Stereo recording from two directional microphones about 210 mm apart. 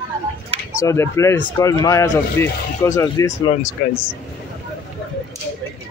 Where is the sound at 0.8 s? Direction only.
15° left (ahead or behind).